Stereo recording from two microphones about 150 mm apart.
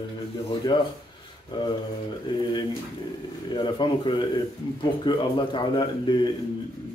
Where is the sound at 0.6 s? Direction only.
30° left (ahead or behind).